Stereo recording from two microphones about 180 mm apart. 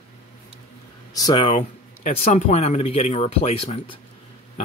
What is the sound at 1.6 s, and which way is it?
Speech, 45° left (ahead or behind).